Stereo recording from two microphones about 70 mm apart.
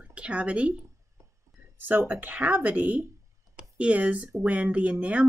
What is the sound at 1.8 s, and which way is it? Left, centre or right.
Speech, right.